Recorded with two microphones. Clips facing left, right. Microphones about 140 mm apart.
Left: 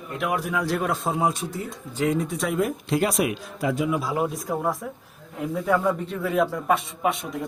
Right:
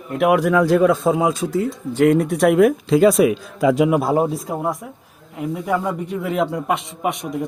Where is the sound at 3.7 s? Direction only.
70° right (ahead or behind).